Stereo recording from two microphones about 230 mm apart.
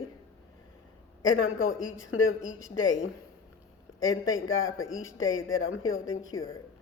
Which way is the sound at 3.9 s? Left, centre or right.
Centre.